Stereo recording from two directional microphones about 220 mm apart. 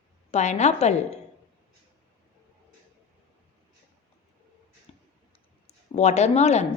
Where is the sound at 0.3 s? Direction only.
30° left (ahead or behind).